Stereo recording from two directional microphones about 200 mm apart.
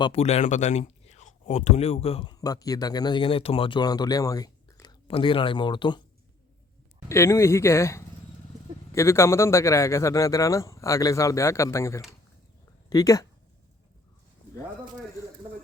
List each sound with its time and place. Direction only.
0.0 s speech: 30° left (ahead or behind)
7.1 s a man's voice: 15° left (ahead or behind)